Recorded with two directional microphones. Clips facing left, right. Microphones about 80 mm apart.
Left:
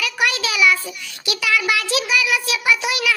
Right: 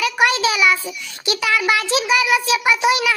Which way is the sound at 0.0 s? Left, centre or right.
Right.